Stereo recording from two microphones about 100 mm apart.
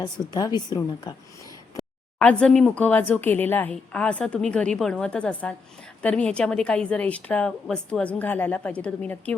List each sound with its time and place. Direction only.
0.0 s a woman's voice: 40° left (ahead or behind)
2.1 s speech: 10° left (ahead or behind)